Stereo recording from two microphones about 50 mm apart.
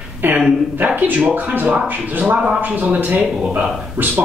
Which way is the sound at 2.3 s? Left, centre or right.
Right.